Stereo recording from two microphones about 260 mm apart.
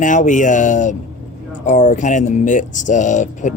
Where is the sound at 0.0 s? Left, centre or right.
Left.